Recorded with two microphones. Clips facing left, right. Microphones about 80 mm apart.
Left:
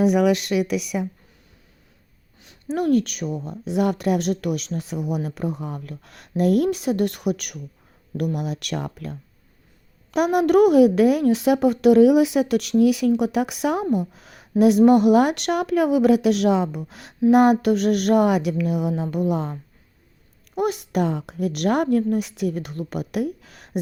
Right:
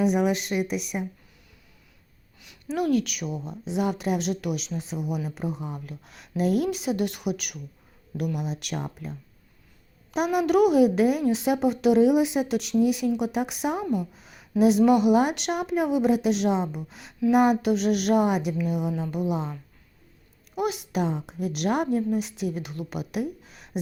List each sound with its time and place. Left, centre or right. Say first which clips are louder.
0.0 s speech: left 5 dB; left
2.4 s speech: left 3 dB; left
3.6 s a woman's voice: left 5 dB; left
14.1 s a sound: left 3 dB; left
14.6 s a woman's voice: left 4 dB; left
19.3 s speech: left 4 dB; left
20.6 s a woman's voice: left 4 dB; left
23.2 s a sound: left 5 dB; left